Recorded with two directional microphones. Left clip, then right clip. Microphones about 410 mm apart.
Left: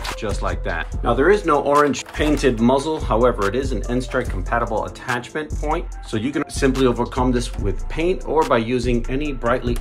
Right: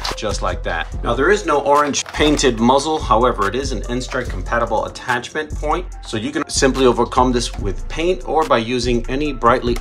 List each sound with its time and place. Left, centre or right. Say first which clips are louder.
0.2 s speech: right 4 dB; centre